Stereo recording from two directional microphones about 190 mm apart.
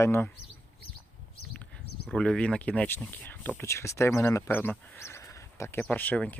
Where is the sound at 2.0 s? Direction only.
5° left (ahead or behind).